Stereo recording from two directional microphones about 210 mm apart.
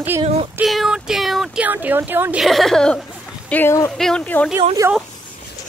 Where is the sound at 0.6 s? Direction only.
Centre (ahead or behind).